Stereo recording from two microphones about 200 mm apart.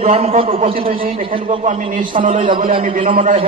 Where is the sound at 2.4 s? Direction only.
25° right (ahead or behind).